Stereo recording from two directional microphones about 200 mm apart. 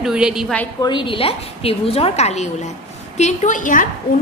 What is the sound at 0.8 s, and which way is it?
A woman's voice, 25° left (ahead or behind).